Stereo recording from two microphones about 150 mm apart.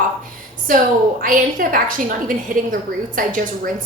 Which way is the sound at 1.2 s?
65° right (ahead or behind).